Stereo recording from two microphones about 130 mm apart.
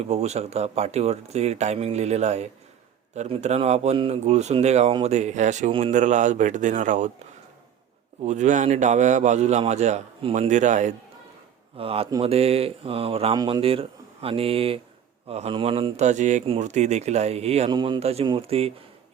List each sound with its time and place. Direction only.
0.0 s speech: 55° right (ahead or behind)
8.2 s speech: 65° right (ahead or behind)
11.8 s speech: 50° right (ahead or behind)
13.3 s speech: 30° right (ahead or behind)
13.6 s speech: 45° right (ahead or behind)
16.0 s speech: 70° right (ahead or behind); by 17.7 s 55° right (ahead or behind)
17.7 s speech: 35° right (ahead or behind)
18.0 s speech: 50° right (ahead or behind)